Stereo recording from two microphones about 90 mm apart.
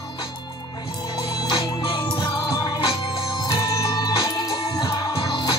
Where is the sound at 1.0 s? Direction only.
55° left (ahead or behind).